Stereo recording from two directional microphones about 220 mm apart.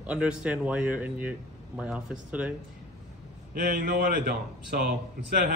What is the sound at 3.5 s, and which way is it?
Speech, 40° right (ahead or behind).